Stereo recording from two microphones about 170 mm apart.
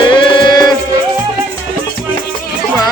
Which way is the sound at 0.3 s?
25° left (ahead or behind).